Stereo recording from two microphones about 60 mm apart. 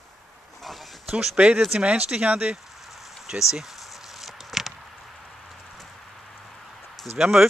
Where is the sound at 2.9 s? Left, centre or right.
Centre.